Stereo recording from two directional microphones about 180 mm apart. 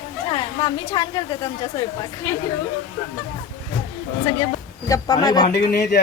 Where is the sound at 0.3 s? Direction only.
25° left (ahead or behind).